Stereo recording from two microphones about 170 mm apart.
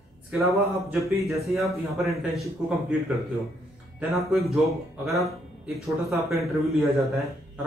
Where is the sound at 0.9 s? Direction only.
Centre (ahead or behind).